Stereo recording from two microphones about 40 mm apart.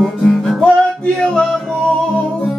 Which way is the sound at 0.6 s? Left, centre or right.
Left.